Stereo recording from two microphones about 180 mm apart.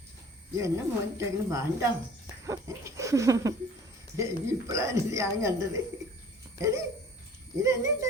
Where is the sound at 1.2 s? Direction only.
15° right (ahead or behind).